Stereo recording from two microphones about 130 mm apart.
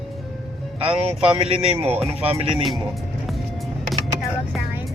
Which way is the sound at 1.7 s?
15° right (ahead or behind).